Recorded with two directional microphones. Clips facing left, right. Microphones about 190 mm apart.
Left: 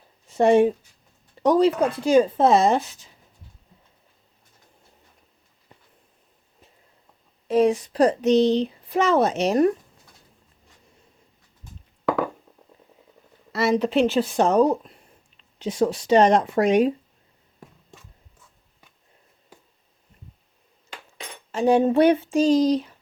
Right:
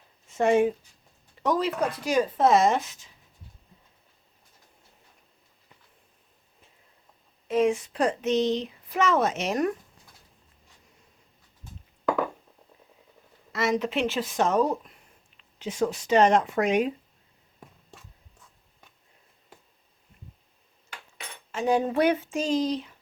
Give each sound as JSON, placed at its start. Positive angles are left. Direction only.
{"t": 0.3, "sound": "speech", "side_deg": 35}
{"t": 7.4, "sound": "speech", "side_deg": 35}
{"t": 13.5, "sound": "speech", "side_deg": 35}
{"t": 20.9, "sound": "cutlery", "side_deg": 30}